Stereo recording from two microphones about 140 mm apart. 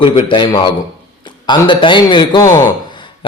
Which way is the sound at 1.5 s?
35° left (ahead or behind).